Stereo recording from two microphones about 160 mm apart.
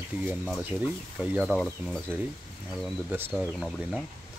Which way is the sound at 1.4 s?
Centre (ahead or behind).